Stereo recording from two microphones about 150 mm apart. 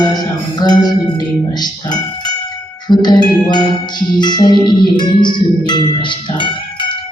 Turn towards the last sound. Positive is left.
turn(degrees=30)  # may be behind; listen again after turning